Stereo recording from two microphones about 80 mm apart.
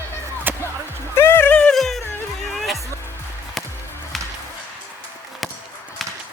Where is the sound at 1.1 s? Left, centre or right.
Left.